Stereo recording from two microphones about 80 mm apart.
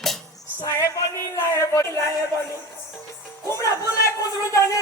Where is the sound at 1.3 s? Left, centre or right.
Left.